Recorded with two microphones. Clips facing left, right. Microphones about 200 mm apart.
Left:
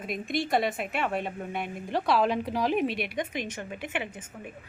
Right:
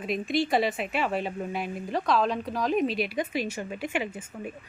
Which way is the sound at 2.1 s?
10° left (ahead or behind).